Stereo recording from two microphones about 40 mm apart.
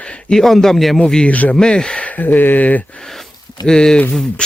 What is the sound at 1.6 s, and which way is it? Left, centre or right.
Speech, centre.